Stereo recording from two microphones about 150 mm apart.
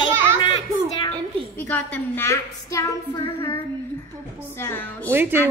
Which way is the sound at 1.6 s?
15° left (ahead or behind).